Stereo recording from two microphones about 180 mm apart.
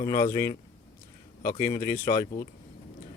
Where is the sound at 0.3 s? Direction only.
20° left (ahead or behind).